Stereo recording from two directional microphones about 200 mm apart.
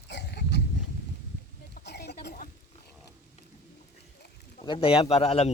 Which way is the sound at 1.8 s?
55° left (ahead or behind).